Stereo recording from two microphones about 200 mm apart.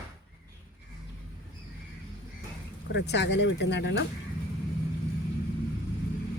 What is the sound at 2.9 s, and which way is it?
Speech, 60° left (ahead or behind).